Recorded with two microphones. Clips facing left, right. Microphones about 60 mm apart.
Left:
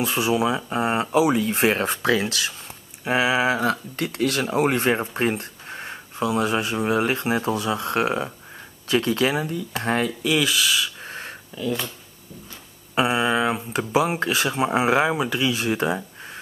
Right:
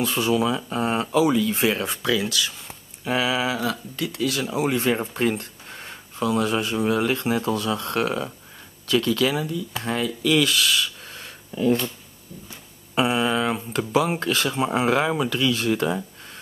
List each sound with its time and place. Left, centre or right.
0.0 s speech: centre
1.3 s speech: left
3.0 s speech: left
3.4 s speech: left
4.9 s a sound: left
6.2 s speech: centre; by 10.1 s left
10.2 s speech: centre
11.1 s a sound: left
12.9 s speech: centre